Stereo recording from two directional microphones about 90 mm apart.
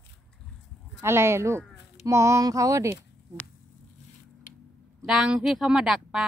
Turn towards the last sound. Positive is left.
turn(degrees=-5)  # may be behind; listen again after turning